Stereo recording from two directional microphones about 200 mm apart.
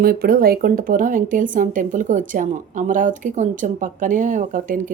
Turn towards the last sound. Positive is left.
turn(degrees=-40)  # may be behind; listen again after turning